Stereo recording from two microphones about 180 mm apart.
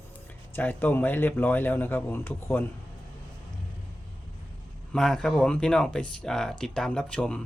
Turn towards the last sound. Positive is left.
turn(degrees=5)  # may be behind; listen again after turning